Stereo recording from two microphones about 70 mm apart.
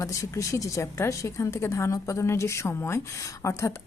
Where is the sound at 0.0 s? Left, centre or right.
Left.